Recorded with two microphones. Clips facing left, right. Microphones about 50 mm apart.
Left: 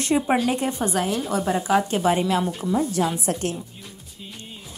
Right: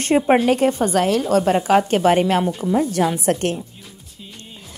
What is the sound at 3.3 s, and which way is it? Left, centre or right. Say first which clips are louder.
Speech: right 6 dB; right.